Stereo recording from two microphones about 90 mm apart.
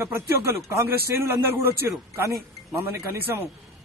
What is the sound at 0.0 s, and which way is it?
A man's voice, 30° right (ahead or behind).